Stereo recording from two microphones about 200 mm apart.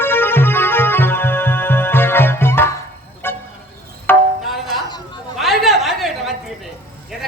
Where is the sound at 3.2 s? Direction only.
10° left (ahead or behind).